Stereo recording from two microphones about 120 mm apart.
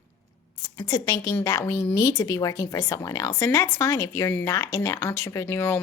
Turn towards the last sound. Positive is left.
turn(degrees=20)  # may be behind; listen again after turning